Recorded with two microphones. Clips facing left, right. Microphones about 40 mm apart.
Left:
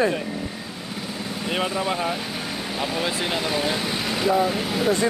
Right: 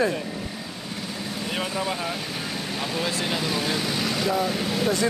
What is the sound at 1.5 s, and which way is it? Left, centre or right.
Speech, centre.